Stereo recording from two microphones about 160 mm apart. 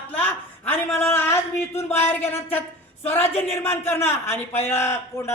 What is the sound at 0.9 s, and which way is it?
A man's voice, 15° left (ahead or behind).